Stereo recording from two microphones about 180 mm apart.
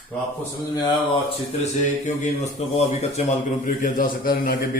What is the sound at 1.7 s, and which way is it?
Speech, 40° left (ahead or behind).